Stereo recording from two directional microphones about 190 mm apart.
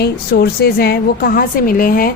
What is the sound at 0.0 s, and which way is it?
A woman's voice, 55° left (ahead or behind).